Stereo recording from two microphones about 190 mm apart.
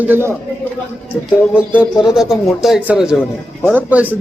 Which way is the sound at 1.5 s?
5° right (ahead or behind).